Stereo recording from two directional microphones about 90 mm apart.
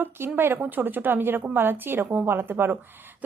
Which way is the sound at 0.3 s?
25° right (ahead or behind).